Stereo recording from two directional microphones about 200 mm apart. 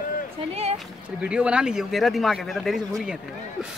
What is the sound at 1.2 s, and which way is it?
Speech, 5° right (ahead or behind).